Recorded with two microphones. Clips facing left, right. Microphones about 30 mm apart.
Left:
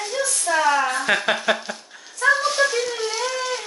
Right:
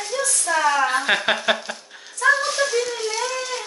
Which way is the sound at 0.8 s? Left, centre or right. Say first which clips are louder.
Right 1 dB; centre.